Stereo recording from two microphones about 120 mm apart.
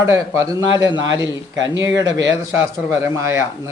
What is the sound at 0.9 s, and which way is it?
Speech, 40° left (ahead or behind).